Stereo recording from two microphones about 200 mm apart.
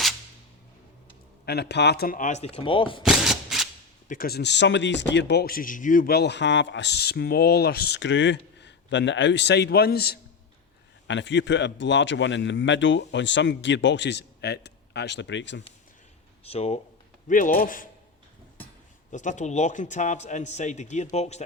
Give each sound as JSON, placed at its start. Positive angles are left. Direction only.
{"t": 1.5, "sound": "a man's voice", "side_deg": 55}
{"t": 3.0, "sound": "a sound", "side_deg": 0}
{"t": 4.1, "sound": "speech", "side_deg": 50}
{"t": 11.1, "sound": "speech", "side_deg": 65}
{"t": 16.4, "sound": "a man's voice", "side_deg": 30}
{"t": 17.2, "sound": "a man's voice", "side_deg": 40}
{"t": 19.1, "sound": "a man's voice", "side_deg": 40}